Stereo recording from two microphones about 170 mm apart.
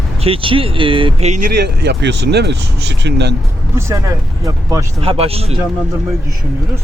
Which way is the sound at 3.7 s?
15° right (ahead or behind).